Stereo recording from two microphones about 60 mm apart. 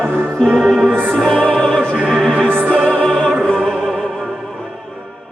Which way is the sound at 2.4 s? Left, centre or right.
Right.